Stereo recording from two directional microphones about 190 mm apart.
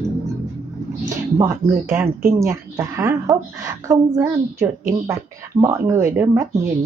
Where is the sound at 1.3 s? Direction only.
15° right (ahead or behind).